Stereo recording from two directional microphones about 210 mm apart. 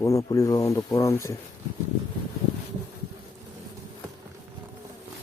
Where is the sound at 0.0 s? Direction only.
15° left (ahead or behind).